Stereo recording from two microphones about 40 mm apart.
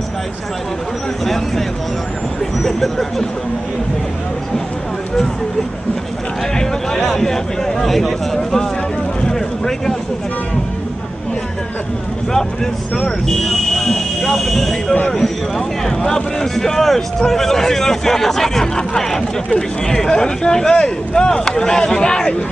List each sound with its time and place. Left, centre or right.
2.6 s speech: centre
6.6 s a man's voice: centre
9.3 s a sound: centre
12.9 s a man's voice: centre